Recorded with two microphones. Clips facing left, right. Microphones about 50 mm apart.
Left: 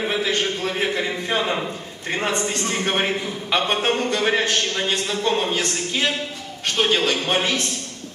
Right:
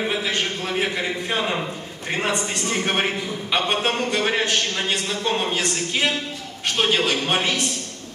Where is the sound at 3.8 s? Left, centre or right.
Centre.